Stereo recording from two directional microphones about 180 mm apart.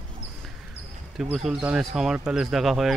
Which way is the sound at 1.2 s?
Centre (ahead or behind).